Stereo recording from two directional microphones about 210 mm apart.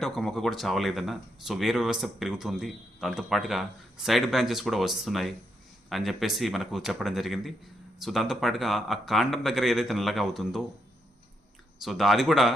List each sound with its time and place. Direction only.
0.0 s speech: centre (ahead or behind)
11.8 s speech: centre (ahead or behind)